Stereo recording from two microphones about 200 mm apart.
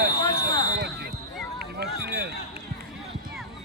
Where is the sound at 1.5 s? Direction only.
50° right (ahead or behind).